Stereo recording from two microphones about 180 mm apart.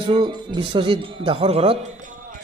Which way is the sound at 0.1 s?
25° right (ahead or behind).